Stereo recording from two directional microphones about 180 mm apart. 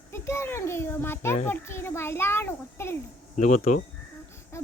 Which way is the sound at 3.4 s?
40° left (ahead or behind).